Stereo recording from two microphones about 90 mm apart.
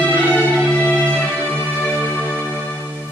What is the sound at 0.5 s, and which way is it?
Music, 10° left (ahead or behind).